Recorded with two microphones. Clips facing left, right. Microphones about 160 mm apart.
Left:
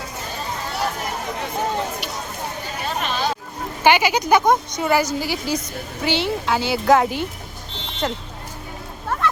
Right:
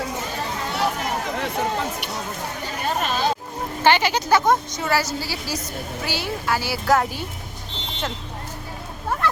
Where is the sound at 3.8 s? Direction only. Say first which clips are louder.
Left 2 dB; 10° left (ahead or behind).